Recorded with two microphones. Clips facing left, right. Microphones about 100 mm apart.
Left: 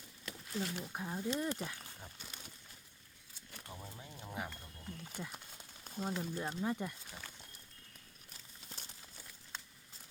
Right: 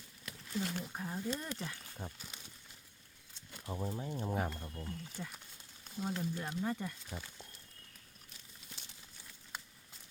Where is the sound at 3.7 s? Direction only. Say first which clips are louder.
Right 12 dB; 25° right (ahead or behind).